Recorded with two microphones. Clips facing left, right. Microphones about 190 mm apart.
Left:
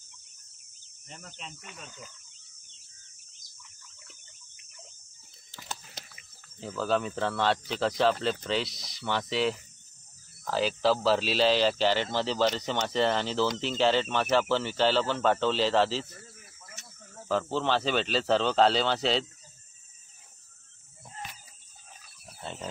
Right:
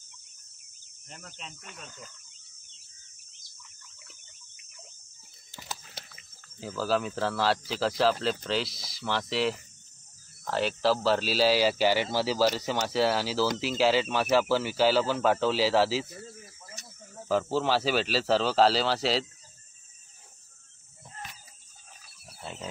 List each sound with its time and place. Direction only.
1.0 s speech: centre (ahead or behind)
4.6 s fowl: centre (ahead or behind)
6.6 s speech: 5° right (ahead or behind)
16.2 s cricket: 25° right (ahead or behind)
17.1 s speech: 10° right (ahead or behind)
22.4 s wild animals: 5° right (ahead or behind)